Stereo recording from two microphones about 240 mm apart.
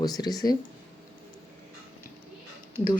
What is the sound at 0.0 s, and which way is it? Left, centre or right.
Speech, centre.